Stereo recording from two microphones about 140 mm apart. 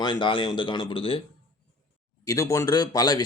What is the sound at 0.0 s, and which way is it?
Speech, 35° left (ahead or behind).